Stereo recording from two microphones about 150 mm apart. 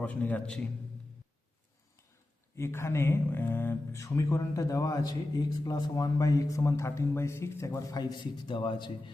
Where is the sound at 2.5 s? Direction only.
15° left (ahead or behind).